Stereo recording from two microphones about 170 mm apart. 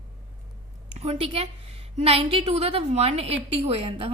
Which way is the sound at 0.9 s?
40° right (ahead or behind).